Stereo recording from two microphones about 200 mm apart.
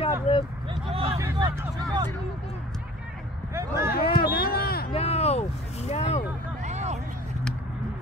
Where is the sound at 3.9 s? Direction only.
50° left (ahead or behind).